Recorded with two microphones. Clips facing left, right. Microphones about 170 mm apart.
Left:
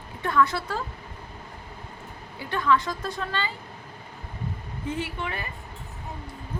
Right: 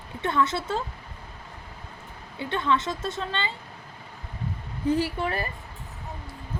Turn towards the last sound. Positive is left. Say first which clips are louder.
# right 5 dB
turn(degrees=-35)  # may be behind; listen again after turning